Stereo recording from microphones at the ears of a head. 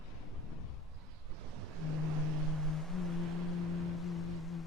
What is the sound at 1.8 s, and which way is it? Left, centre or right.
Vehicle, left.